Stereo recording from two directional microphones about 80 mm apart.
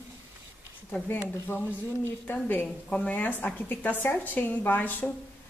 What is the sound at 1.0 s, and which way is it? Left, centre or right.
A woman's voice, left.